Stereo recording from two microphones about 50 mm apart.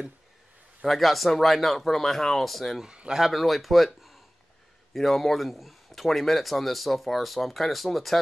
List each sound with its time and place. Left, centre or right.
0.8 s speech: centre
2.8 s speech: centre
3.1 s speech: centre